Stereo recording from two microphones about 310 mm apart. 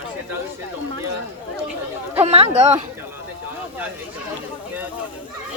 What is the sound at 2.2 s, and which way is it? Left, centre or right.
Speech, centre.